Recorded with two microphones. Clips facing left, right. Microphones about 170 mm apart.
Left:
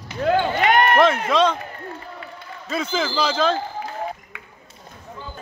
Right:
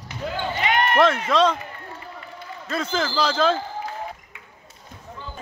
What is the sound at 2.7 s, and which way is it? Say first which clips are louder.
Speech: left 1 dB; centre (ahead or behind).